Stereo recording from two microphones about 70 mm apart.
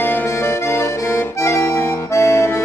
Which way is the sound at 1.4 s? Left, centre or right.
Left.